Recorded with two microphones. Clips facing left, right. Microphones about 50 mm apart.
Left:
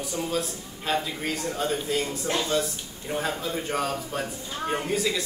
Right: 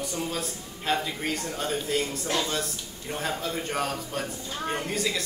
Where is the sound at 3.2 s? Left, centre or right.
Centre.